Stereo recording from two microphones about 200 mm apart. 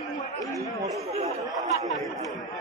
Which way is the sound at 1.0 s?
30° right (ahead or behind).